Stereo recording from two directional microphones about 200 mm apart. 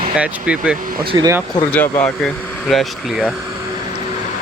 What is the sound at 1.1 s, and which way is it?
Speech, 20° right (ahead or behind).